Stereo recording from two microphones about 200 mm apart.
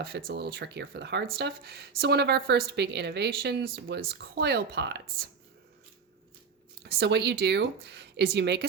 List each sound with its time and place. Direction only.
0.0 s a woman's voice: 50° right (ahead or behind)
6.8 s a woman's voice: 55° right (ahead or behind)